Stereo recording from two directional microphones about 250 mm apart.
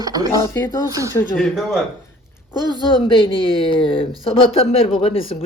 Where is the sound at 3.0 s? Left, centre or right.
Centre.